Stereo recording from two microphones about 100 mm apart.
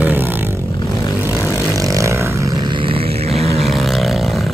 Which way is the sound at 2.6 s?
55° right (ahead or behind).